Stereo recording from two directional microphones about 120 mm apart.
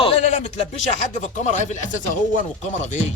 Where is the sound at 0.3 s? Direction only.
75° left (ahead or behind).